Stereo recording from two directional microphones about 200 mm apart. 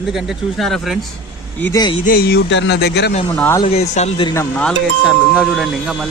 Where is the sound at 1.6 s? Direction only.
10° left (ahead or behind).